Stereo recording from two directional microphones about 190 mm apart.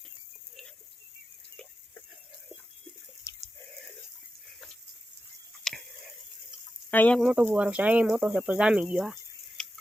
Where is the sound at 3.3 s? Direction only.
15° left (ahead or behind).